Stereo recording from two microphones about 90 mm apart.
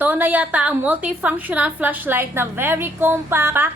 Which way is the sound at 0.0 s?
20° right (ahead or behind).